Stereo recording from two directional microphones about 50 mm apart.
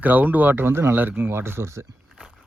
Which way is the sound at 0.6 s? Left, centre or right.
Right.